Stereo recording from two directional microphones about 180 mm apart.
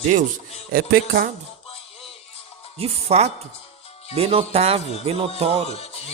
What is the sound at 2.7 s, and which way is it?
Music, 35° right (ahead or behind).